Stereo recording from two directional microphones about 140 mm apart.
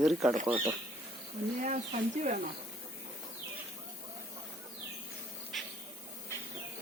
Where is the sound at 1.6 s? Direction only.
60° right (ahead or behind).